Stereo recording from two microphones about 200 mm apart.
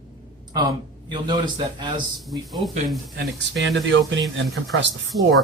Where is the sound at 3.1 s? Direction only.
65° right (ahead or behind).